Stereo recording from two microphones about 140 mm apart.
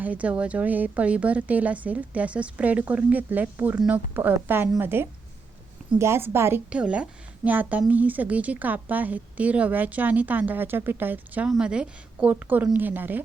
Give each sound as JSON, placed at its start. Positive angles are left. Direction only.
{"t": 0.0, "sound": "a woman's voice", "side_deg": -10}